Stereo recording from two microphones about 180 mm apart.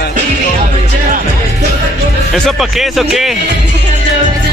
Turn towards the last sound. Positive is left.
turn(degrees=0)  # may be behind; listen again after turning